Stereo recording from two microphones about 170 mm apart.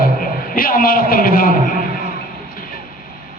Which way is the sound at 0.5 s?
55° left (ahead or behind).